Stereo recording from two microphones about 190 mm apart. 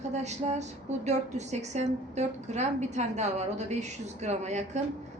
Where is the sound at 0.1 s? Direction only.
35° right (ahead or behind).